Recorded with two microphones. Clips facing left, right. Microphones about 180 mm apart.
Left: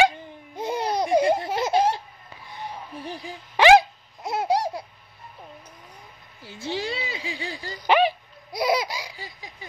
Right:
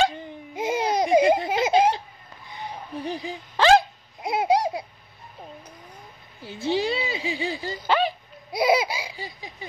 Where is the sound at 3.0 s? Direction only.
20° right (ahead or behind).